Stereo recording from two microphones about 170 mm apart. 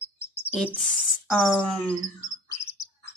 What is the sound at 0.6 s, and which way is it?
Speech, centre (ahead or behind).